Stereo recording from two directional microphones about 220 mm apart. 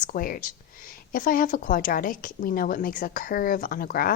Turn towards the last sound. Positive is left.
turn(degrees=40)  # may be behind; listen again after turning